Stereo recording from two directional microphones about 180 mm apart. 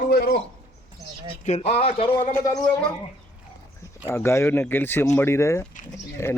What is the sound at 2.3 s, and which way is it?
Speech, 20° left (ahead or behind).